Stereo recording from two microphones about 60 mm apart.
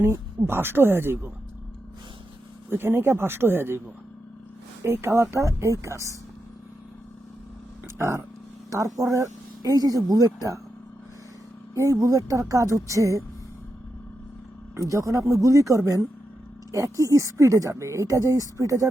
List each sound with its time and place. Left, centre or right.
0.0 s speech: right
2.6 s speech: right
4.8 s speech: right
7.9 s speech: right
8.7 s speech: right
11.7 s speech: right
14.8 s speech: right